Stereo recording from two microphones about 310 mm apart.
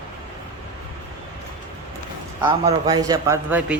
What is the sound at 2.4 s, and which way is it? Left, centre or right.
A man's voice, centre.